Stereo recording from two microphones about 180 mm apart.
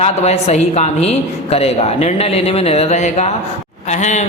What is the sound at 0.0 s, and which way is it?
A woman's voice, 35° left (ahead or behind).